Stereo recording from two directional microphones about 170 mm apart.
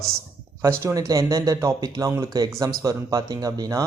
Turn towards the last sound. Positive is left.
turn(degrees=-20)  # may be behind; listen again after turning